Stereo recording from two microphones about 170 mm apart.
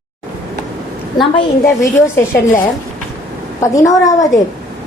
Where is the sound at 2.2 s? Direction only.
15° left (ahead or behind).